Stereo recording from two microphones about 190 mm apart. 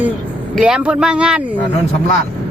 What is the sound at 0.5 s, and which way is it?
Speech, 5° right (ahead or behind).